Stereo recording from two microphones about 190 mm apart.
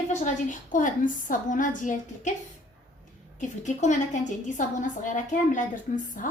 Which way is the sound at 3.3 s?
40° left (ahead or behind).